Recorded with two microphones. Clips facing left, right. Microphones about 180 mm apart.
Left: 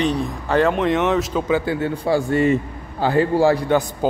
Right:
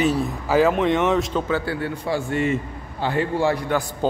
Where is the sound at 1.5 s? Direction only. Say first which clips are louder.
Left 4 dB; 20° left (ahead or behind).